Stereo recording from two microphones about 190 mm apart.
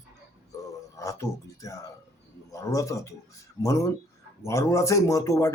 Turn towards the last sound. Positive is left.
turn(degrees=15)  # may be behind; listen again after turning